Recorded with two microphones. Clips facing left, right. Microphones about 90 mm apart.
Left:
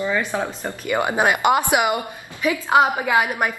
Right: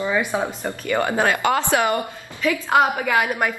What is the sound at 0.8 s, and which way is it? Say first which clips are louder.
A woman's voice: left 1 dB; 15° left (ahead or behind).